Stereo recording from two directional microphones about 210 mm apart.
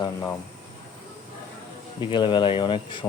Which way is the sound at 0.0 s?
15° left (ahead or behind).